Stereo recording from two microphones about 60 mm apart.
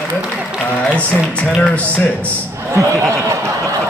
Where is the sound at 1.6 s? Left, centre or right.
Left.